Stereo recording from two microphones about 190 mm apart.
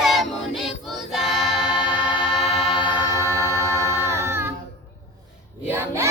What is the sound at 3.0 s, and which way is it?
Music, 20° left (ahead or behind).